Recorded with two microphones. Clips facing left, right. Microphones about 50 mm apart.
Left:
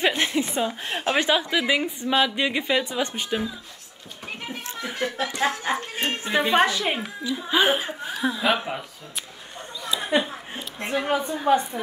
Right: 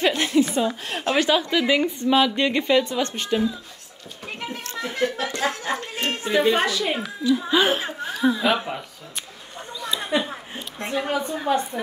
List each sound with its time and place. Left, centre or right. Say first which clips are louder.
0.0 s a woman's voice: right 3 dB; left
1.5 s a woman's voice: right 3 dB; centre
4.6 s chuckle: right 4 dB; centre
5.3 s a sound: left 1 dB; centre
6.4 s a woman's voice: left 2 dB; left
7.2 s a woman's voice: right 2 dB; centre
8.2 s speech: right 3 dB; centre
9.8 s a sound: right 1 dB; centre
10.8 s a woman's voice: even; left